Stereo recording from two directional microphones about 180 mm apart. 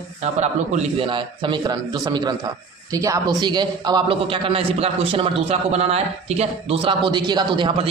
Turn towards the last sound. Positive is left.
turn(degrees=-25)  # may be behind; listen again after turning